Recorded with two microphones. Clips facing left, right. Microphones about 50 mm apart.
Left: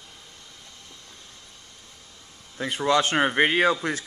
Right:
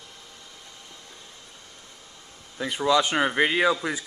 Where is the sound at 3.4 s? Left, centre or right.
Left.